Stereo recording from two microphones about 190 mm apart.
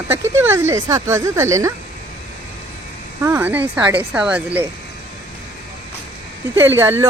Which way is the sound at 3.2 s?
10° right (ahead or behind).